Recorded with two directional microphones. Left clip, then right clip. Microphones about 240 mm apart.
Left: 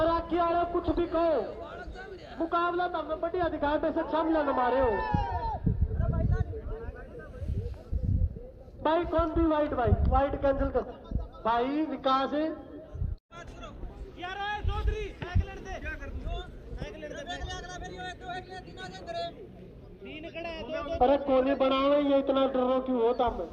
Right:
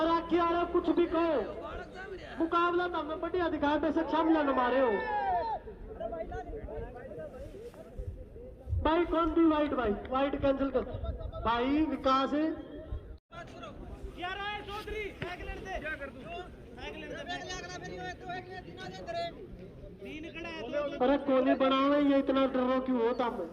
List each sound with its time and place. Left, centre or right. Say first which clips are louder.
0.0 s a man's voice: left 2 dB; right
4.9 s speech: left 1 dB; centre
8.8 s speech: left 2 dB; right
14.2 s a sound: left 3 dB; right
16.8 s a sound: left 1 dB; right
17.2 s speech: left 1 dB; centre
20.1 s speech: left 4 dB; right